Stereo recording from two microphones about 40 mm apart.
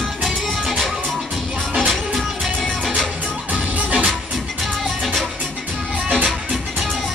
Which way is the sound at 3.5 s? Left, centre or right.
Right.